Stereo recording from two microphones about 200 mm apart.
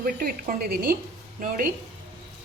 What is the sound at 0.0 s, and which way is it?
A woman's voice, 50° right (ahead or behind).